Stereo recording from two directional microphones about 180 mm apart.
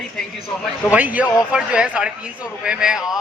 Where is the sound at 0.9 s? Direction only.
10° right (ahead or behind).